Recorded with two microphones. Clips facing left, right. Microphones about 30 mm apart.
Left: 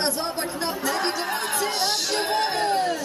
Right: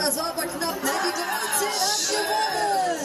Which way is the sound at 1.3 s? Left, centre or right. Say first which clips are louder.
Even; left.